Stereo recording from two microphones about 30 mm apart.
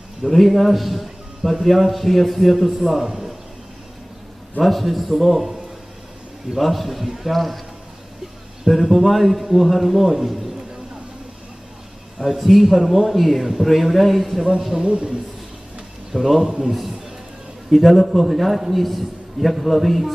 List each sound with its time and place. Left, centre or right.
0.2 s a man's voice: centre
4.6 s a man's voice: centre
6.6 s a man's voice: centre
8.6 s a man's voice: centre
12.4 s a man's voice: centre
14.8 s a man's voice: right
16.1 s a man's voice: centre
17.7 s a man's voice: centre